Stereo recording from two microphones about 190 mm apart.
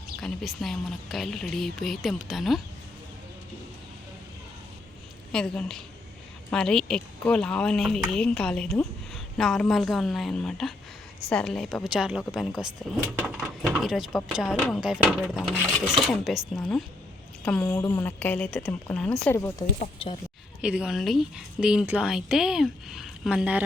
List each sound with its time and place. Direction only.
0.2 s speech: centre (ahead or behind)
5.3 s a woman's voice: 5° left (ahead or behind)
19.3 s a woman's voice: 15° left (ahead or behind)
20.0 s a woman's voice: 25° left (ahead or behind)
20.6 s speech: 5° right (ahead or behind)